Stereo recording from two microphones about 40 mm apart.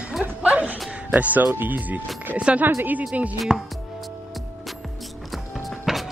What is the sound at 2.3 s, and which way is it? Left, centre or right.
Speech, right.